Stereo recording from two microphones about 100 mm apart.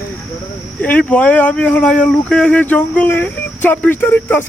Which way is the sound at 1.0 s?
15° left (ahead or behind).